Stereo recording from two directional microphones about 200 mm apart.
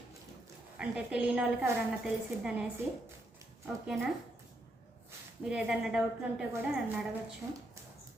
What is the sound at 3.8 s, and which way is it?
Speech, centre (ahead or behind).